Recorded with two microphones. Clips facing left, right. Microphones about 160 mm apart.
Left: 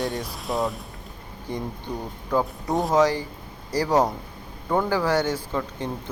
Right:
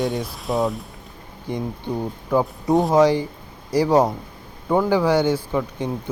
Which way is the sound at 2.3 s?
10° right (ahead or behind).